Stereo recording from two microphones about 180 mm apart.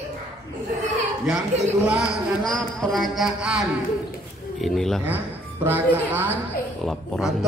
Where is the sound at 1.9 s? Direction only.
10° right (ahead or behind).